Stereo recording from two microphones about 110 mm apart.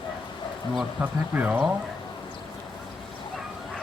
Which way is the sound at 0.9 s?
15° right (ahead or behind).